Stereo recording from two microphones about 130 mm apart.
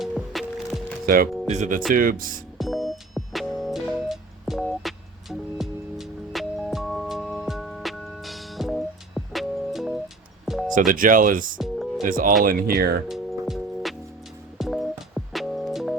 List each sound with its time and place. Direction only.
0.0 s music: centre (ahead or behind)
1.0 s speech: 90° right
1.5 s speech: 65° right (ahead or behind)
1.9 s speech: 90° right
2.6 s music: centre (ahead or behind)
10.4 s a sound: centre (ahead or behind)
10.8 s speech: 90° right
11.5 s music: 5° right (ahead or behind)
12.0 s speech: 90° right
13.4 s music: centre (ahead or behind)